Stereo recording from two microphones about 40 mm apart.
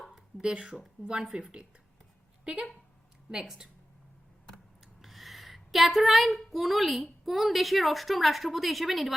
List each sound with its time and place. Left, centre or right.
0.4 s speech: right
3.4 s speech: centre
5.0 s a woman's voice: centre